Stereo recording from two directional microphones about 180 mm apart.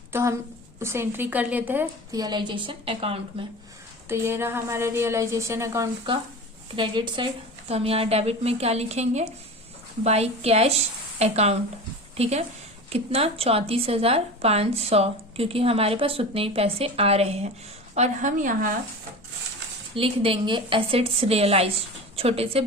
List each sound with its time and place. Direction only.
0.1 s a woman's voice: 15° right (ahead or behind)
2.1 s a woman's voice: 25° right (ahead or behind)
4.1 s a woman's voice: 15° right (ahead or behind)
6.7 s a woman's voice: 25° right (ahead or behind); by 18.7 s 45° right (ahead or behind)
20.0 s a woman's voice: 30° right (ahead or behind)